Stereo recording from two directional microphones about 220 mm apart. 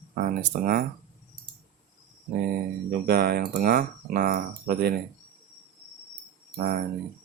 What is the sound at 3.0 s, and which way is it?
Speech, 45° right (ahead or behind).